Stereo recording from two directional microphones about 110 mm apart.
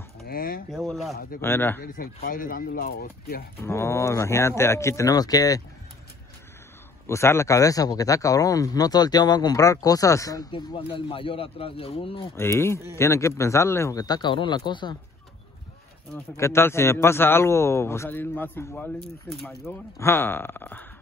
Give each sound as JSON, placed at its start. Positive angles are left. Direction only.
{"t": 0.2, "sound": "speech", "side_deg": 0}
{"t": 1.4, "sound": "a man's voice", "side_deg": 20}
{"t": 3.5, "sound": "a man's voice", "side_deg": 25}
{"t": 7.1, "sound": "speech", "side_deg": 25}
{"t": 10.5, "sound": "speech", "side_deg": 50}
{"t": 12.4, "sound": "a man's voice", "side_deg": 25}
{"t": 14.0, "sound": "speech", "side_deg": 40}
{"t": 16.3, "sound": "a man's voice", "side_deg": 25}